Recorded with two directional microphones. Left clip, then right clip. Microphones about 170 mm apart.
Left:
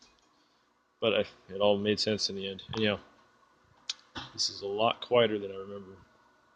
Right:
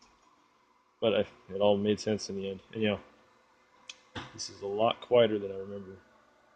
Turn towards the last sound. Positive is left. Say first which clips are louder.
# right 1 dB
turn(degrees=-15)  # may be behind; listen again after turning